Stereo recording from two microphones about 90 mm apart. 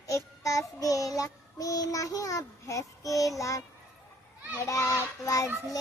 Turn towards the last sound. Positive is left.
turn(degrees=40)  # may be behind; listen again after turning